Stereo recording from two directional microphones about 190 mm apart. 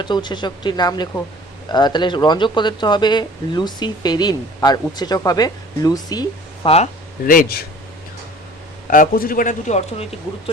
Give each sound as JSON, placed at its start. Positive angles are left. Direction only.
{"t": 0.0, "sound": "speech", "side_deg": 25}
{"t": 7.3, "sound": "a man's voice", "side_deg": 50}
{"t": 8.9, "sound": "a man's voice", "side_deg": 45}